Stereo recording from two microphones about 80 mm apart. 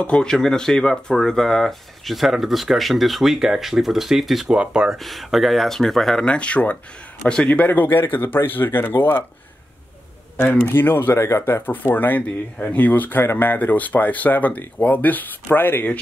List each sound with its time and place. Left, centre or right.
0.0 s speech: centre
4.9 s a man's voice: centre
7.6 s speech: left
10.3 s speech: left